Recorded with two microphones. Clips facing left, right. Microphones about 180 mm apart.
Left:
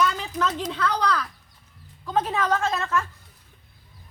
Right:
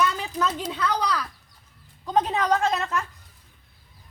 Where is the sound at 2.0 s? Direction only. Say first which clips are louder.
Right 1 dB; 20° right (ahead or behind).